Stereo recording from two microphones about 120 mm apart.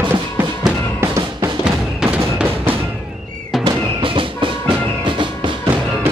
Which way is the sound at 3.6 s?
45° right (ahead or behind).